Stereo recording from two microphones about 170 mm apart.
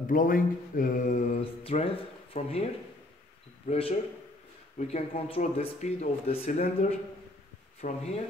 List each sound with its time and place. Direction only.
0.0 s speech: 55° left (ahead or behind)
1.6 s speech: 35° left (ahead or behind)